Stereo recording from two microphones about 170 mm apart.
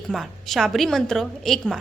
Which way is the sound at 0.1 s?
Centre (ahead or behind).